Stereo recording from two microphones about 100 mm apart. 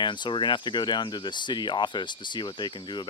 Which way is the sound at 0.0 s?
50° left (ahead or behind).